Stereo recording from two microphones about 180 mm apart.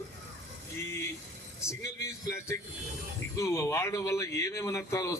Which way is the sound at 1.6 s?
15° left (ahead or behind).